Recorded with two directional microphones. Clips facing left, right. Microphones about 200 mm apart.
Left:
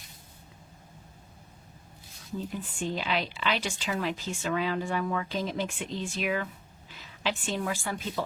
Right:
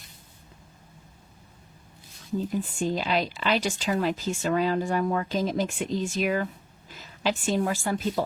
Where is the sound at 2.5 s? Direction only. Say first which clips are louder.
Right 5 dB; 40° right (ahead or behind).